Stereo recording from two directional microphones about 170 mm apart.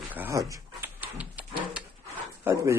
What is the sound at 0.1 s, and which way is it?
Dog, 15° right (ahead or behind).